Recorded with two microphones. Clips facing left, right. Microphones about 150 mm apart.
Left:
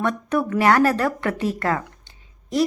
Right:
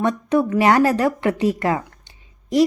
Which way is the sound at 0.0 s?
15° right (ahead or behind).